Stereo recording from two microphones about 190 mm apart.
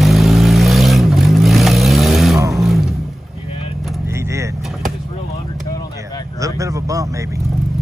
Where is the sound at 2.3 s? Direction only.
15° right (ahead or behind).